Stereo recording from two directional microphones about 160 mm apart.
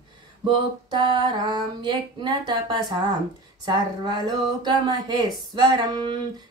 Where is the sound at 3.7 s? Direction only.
25° right (ahead or behind).